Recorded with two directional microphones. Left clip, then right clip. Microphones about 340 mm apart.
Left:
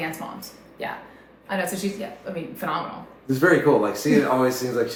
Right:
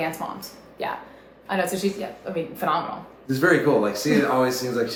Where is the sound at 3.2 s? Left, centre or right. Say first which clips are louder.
Left 1 dB; centre.